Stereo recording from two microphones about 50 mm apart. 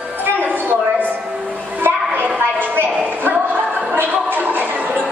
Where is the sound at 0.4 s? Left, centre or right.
Right.